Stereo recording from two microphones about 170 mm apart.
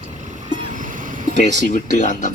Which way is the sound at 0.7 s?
50° right (ahead or behind).